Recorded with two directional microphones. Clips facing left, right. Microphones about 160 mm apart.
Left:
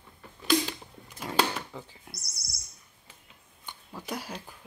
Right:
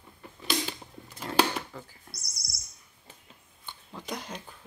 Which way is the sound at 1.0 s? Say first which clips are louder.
Right 2 dB; 10° left (ahead or behind).